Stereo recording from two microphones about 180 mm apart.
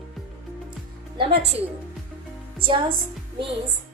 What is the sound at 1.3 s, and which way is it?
Speech, 65° right (ahead or behind).